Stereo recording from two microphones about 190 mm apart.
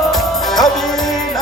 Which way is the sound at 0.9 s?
20° left (ahead or behind).